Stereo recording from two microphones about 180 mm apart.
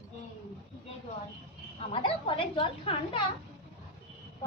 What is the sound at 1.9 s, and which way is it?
Speech, 30° left (ahead or behind).